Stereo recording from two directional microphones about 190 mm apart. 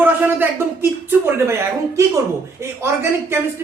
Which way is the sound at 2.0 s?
15° right (ahead or behind).